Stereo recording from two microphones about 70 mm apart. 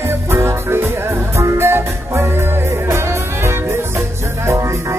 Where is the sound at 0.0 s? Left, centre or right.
Right.